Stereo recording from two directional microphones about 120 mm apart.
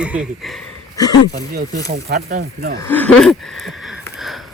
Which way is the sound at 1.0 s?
30° left (ahead or behind).